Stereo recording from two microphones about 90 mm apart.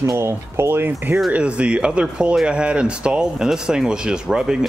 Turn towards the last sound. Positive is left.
turn(degrees=-10)  # may be behind; listen again after turning